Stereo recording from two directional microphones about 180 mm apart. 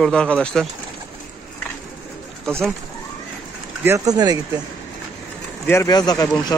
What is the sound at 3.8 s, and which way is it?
Speech, 20° right (ahead or behind).